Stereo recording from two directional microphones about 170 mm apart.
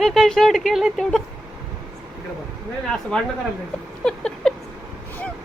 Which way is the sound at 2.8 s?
5° left (ahead or behind).